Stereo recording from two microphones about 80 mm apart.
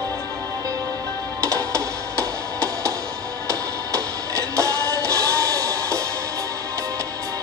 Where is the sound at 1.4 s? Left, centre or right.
Right.